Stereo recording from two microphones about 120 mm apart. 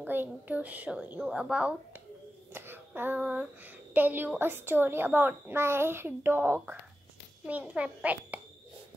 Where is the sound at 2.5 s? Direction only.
15° right (ahead or behind).